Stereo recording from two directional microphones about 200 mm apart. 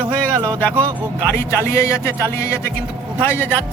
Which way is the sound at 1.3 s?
15° left (ahead or behind).